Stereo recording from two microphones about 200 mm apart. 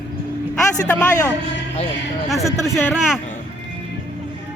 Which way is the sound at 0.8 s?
15° left (ahead or behind).